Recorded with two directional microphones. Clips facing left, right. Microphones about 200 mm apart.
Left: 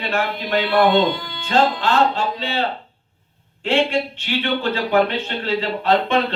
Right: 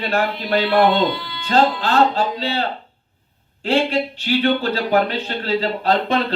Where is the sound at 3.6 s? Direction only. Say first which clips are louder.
Right 1 dB; 35° right (ahead or behind).